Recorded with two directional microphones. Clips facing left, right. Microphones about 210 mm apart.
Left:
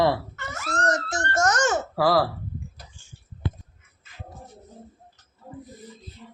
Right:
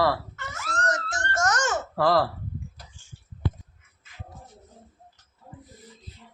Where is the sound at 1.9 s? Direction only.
5° left (ahead or behind).